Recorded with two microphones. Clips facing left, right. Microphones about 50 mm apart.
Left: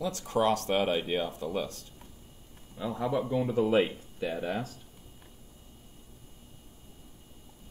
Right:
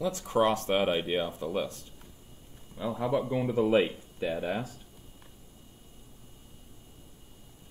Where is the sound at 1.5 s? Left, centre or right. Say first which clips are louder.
Right 2 dB; right.